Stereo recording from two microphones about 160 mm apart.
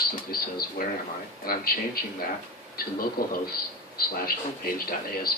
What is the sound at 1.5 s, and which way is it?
Speech, 70° left (ahead or behind).